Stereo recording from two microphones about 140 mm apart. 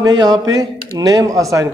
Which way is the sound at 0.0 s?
30° right (ahead or behind).